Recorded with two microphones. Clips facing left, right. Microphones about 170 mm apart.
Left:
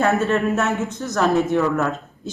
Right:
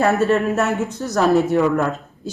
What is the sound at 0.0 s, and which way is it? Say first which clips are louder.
Speech: right 2 dB; centre (ahead or behind).